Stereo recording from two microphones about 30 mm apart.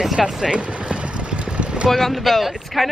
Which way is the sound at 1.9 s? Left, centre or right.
Centre.